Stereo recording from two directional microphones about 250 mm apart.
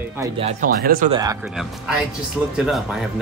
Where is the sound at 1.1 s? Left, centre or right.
Centre.